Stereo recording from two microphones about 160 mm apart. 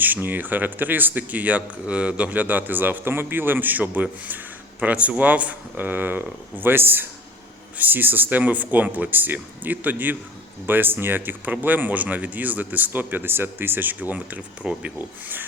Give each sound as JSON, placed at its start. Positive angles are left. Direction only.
{"t": 0.0, "sound": "speech", "side_deg": -10}